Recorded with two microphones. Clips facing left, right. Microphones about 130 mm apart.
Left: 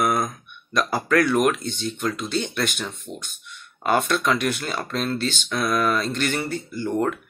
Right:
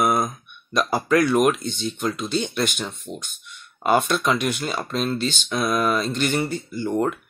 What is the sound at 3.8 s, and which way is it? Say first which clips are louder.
Speech: right 1 dB; 15° right (ahead or behind).